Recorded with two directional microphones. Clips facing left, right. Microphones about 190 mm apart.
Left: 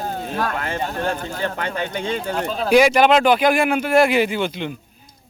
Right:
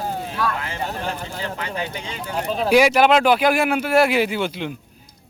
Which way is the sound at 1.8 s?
55° left (ahead or behind).